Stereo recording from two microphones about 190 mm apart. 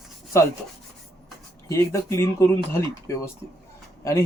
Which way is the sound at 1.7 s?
15° left (ahead or behind).